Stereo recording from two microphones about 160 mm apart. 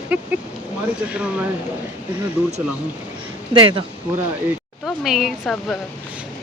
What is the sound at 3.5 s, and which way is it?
Speech, 35° right (ahead or behind).